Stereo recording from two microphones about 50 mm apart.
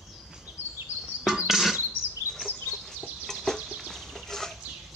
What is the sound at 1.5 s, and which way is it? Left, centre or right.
Music, centre.